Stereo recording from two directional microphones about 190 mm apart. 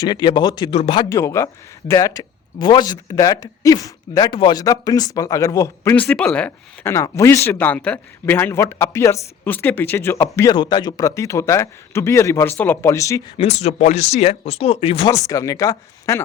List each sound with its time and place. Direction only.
0.0 s speech: 20° left (ahead or behind)
1.1 s speech: 15° left (ahead or behind)
13.3 s speech: 35° left (ahead or behind)
15.3 s speech: 15° left (ahead or behind)